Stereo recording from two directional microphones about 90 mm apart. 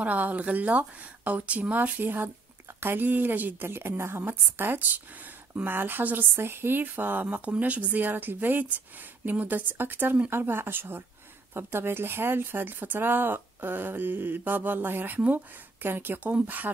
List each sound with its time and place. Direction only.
0.0 s a woman's voice: 15° right (ahead or behind)